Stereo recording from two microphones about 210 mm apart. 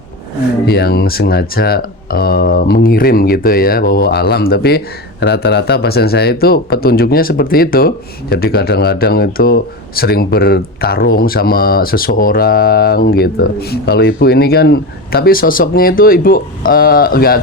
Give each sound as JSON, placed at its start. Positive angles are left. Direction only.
{"t": 0.6, "sound": "speech", "side_deg": 50}